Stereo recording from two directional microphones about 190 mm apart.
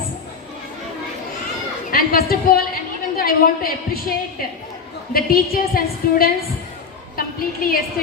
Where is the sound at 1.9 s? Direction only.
50° left (ahead or behind).